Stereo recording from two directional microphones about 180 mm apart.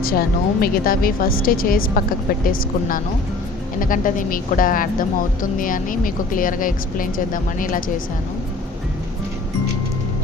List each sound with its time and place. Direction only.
0.0 s a woman's voice: 55° left (ahead or behind)